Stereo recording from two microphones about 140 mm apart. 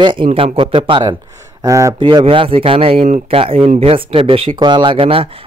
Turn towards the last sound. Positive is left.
turn(degrees=-40)  # may be behind; listen again after turning